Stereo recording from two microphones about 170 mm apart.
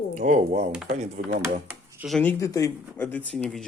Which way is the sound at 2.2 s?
15° left (ahead or behind).